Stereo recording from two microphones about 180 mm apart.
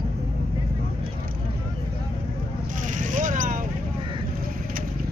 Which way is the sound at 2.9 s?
45° right (ahead or behind).